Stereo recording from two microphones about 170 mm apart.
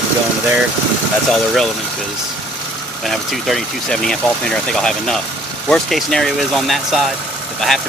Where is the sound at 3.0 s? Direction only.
Centre (ahead or behind).